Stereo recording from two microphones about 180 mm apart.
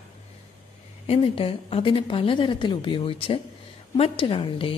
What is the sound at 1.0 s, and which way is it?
A woman's voice, 30° left (ahead or behind).